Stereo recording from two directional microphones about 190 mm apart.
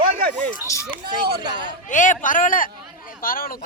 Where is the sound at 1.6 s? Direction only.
40° left (ahead or behind).